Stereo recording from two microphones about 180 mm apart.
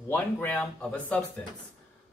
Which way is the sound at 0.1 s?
10° left (ahead or behind).